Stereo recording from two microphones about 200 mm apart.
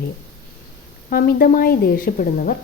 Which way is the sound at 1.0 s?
45° left (ahead or behind).